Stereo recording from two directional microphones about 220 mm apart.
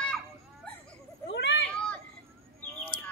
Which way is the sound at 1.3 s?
50° left (ahead or behind).